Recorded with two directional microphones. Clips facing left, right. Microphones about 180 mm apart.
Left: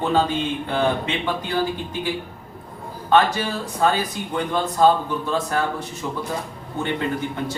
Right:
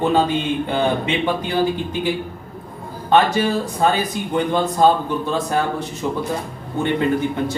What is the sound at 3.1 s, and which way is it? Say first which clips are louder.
A man's voice: right 3 dB; 20° right (ahead or behind).